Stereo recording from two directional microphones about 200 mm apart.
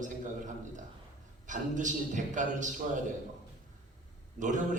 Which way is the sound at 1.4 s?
40° right (ahead or behind).